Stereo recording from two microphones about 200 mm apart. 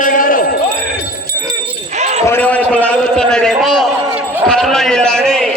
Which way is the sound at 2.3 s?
10° left (ahead or behind).